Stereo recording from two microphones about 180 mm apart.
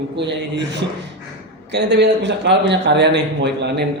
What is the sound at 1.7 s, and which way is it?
A man's voice, 70° right (ahead or behind).